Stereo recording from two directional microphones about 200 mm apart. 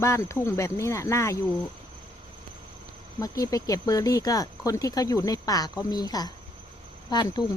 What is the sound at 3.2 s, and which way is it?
Speech, 15° left (ahead or behind).